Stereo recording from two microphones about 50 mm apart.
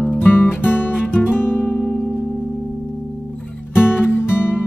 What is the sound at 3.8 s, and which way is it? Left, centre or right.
Music, left.